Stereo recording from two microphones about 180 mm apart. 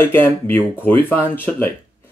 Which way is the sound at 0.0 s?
10° left (ahead or behind).